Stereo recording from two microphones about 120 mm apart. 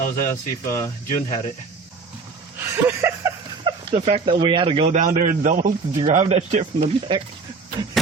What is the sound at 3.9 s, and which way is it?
A man's voice, 60° right (ahead or behind).